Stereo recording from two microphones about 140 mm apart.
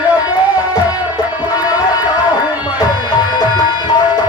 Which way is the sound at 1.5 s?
25° left (ahead or behind).